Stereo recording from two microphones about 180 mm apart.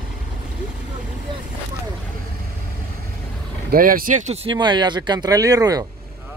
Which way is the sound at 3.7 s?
55° right (ahead or behind).